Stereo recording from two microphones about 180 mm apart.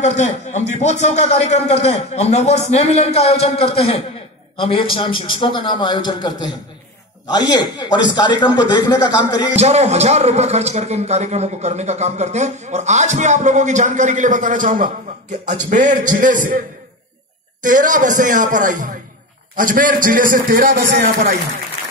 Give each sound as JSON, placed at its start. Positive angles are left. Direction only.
{"t": 0.0, "sound": "a man's voice", "side_deg": 40}
{"t": 9.6, "sound": "a man's voice", "side_deg": -35}